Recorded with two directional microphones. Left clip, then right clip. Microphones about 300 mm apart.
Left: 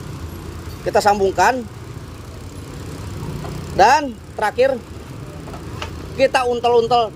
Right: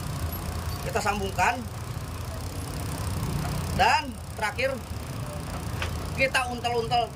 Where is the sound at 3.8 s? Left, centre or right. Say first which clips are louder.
Left 10 dB; centre.